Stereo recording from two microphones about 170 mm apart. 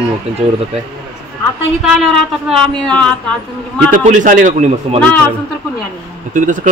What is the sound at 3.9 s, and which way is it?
A man's voice, 50° right (ahead or behind).